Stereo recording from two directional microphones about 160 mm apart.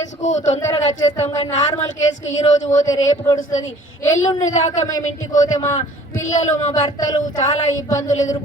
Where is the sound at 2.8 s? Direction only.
20° left (ahead or behind).